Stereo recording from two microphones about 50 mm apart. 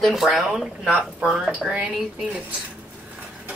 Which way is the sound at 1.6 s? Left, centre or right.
Centre.